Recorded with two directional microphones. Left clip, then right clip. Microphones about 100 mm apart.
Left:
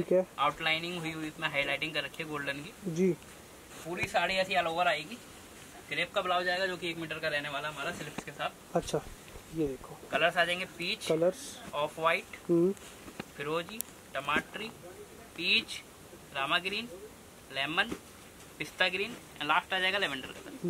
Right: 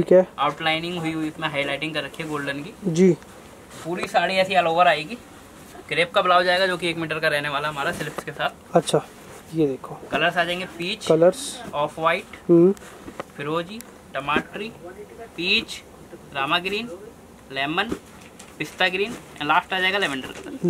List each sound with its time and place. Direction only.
0.4 s speech: 5° left (ahead or behind)
2.9 s a man's voice: 20° right (ahead or behind)
3.9 s a man's voice: 5° left (ahead or behind)
12.4 s speech: 15° right (ahead or behind)
13.4 s speech: 5° left (ahead or behind)